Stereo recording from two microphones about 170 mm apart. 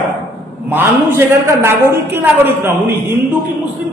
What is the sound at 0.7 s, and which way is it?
A woman's voice, 10° right (ahead or behind).